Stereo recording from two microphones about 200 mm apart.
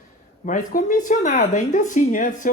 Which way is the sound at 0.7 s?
40° left (ahead or behind).